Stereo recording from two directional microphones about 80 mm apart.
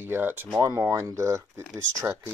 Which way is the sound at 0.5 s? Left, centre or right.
Right.